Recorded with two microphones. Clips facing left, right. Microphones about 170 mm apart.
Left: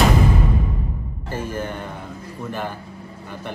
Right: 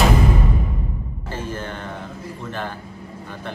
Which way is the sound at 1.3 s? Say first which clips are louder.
Left 2 dB; 10° left (ahead or behind).